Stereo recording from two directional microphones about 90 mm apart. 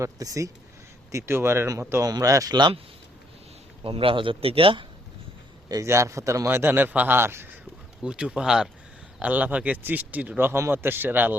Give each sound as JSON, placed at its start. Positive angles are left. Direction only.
{"t": 0.0, "sound": "speech", "side_deg": -40}
{"t": 1.1, "sound": "speech", "side_deg": -30}
{"t": 2.0, "sound": "speech", "side_deg": -40}
{"t": 3.8, "sound": "a man's voice", "side_deg": -90}
{"t": 5.6, "sound": "speech", "side_deg": -35}
{"t": 8.0, "sound": "speech", "side_deg": -10}